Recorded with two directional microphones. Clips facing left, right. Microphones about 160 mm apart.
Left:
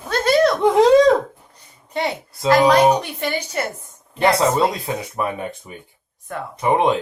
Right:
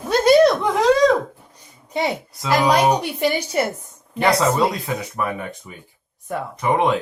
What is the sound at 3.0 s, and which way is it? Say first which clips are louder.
Speech: right 4 dB; 10° right (ahead or behind).